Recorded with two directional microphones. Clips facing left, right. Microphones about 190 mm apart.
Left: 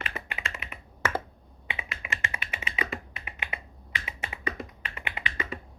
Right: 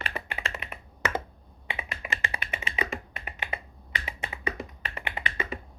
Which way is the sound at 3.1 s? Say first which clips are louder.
Right 3 dB; 40° right (ahead or behind).